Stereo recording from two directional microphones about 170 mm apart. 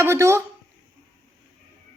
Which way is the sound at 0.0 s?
15° right (ahead or behind).